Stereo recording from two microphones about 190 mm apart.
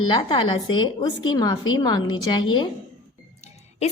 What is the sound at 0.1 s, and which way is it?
Speech, 25° left (ahead or behind).